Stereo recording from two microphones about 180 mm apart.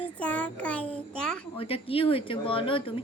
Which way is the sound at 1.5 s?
30° left (ahead or behind).